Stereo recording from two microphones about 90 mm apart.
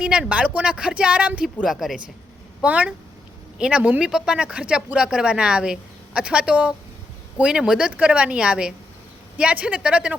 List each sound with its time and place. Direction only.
0.0 s speech: 10° right (ahead or behind)
1.6 s speech: 5° right (ahead or behind)
2.6 s speech: 15° right (ahead or behind)